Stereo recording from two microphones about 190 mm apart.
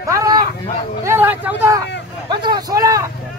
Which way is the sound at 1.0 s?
10° right (ahead or behind).